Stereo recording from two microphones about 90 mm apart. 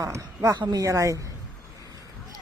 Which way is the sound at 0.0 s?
35° right (ahead or behind).